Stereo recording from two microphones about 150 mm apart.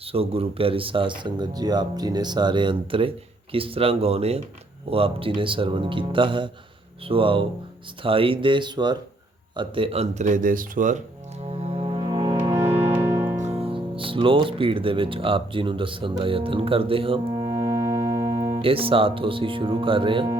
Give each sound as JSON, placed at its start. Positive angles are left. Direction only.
{"t": 0.0, "sound": "speech", "side_deg": -40}
{"t": 11.4, "sound": "music", "side_deg": -45}
{"t": 12.5, "sound": "music", "side_deg": -20}
{"t": 13.4, "sound": "speech", "side_deg": -45}